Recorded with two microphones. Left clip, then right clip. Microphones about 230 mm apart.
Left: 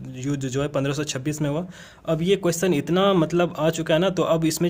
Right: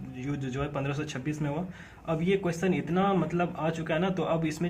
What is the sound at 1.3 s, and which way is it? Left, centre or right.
Speech, left.